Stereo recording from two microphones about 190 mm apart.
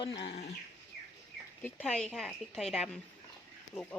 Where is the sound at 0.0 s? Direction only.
25° left (ahead or behind).